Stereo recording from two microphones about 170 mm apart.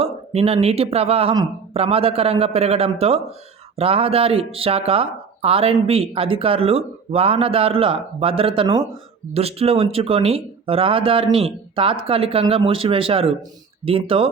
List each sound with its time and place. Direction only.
0.0 s speech: 35° right (ahead or behind)